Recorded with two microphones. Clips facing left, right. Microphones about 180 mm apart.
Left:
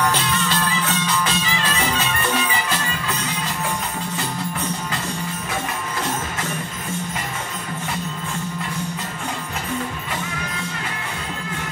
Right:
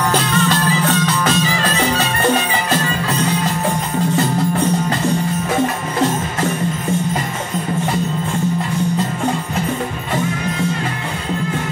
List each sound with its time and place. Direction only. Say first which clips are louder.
0.1 s music: right 6 dB; 45° right (ahead or behind)